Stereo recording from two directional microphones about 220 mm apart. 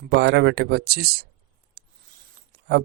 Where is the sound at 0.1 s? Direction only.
50° right (ahead or behind).